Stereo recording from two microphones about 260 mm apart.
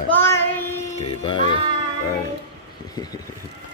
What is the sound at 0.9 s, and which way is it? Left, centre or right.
Music, left.